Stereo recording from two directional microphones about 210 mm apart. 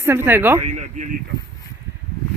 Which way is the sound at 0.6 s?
30° right (ahead or behind).